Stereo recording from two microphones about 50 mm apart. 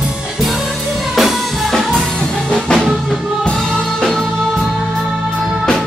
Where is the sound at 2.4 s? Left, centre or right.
Left.